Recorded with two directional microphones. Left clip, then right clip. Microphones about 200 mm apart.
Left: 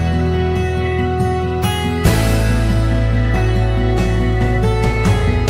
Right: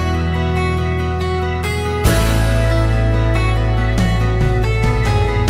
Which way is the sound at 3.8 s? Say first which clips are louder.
Left 2 dB; centre (ahead or behind).